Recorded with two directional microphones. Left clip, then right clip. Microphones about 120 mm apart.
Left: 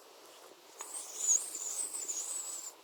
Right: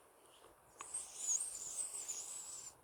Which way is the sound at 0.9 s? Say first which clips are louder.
Left 9 dB; 10° right (ahead or behind).